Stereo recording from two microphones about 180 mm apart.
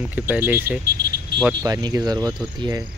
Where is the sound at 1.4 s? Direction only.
20° right (ahead or behind).